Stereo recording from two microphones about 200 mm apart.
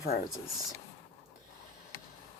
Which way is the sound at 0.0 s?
50° left (ahead or behind).